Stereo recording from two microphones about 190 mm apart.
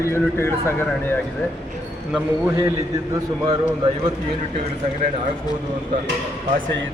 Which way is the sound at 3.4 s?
25° right (ahead or behind).